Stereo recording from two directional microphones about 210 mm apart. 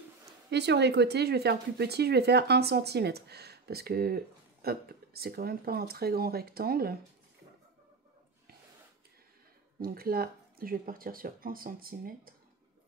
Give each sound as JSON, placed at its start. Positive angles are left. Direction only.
{"t": 0.5, "sound": "speech", "side_deg": -55}
{"t": 9.8, "sound": "speech", "side_deg": -45}